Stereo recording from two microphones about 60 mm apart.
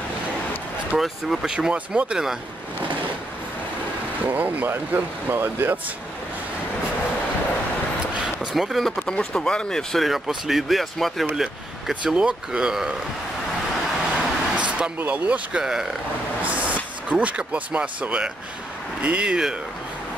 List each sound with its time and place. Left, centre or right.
0.9 s speech: centre
4.3 s speech: right
8.1 s vehicle: centre
8.8 s speech: centre
10.0 s speech: centre
11.3 s speech: centre
14.1 s vehicle: centre
15.0 s speech: right
15.6 s speech: centre
17.1 s speech: right